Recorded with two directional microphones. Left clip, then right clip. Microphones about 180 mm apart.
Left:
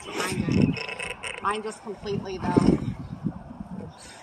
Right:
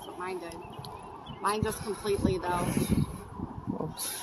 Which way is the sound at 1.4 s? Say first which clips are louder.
Even; 35° right (ahead or behind).